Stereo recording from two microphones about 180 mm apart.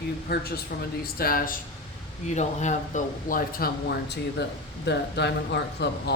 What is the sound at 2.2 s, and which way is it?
A woman's voice, 40° left (ahead or behind).